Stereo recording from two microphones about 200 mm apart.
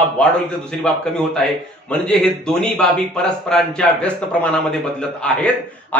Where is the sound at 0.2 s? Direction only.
5° left (ahead or behind).